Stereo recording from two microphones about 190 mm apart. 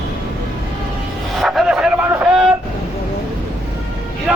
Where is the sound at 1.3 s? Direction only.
Centre (ahead or behind).